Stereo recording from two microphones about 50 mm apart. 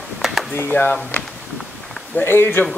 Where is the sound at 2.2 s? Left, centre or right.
Left.